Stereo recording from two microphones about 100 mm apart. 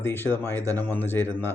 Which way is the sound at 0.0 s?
20° left (ahead or behind).